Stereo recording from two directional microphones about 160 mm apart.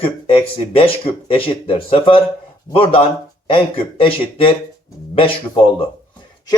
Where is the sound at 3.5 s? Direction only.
35° left (ahead or behind).